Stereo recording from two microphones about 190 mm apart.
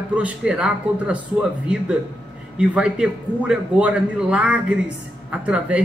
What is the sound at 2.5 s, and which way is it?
A man's voice, 5° right (ahead or behind).